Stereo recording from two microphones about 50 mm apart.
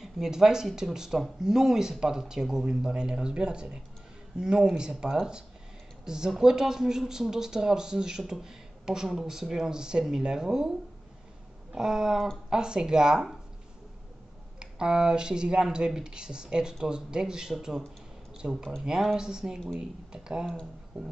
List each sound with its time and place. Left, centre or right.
0.0 s speech: centre
14.6 s speech: centre